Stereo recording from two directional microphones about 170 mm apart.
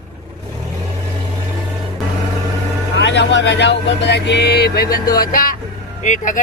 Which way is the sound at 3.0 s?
90° left.